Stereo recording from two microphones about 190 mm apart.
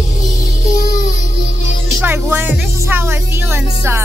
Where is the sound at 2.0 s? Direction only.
10° right (ahead or behind).